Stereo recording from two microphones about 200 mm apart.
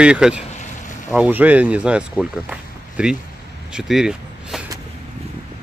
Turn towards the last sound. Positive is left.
turn(degrees=0)  # may be behind; listen again after turning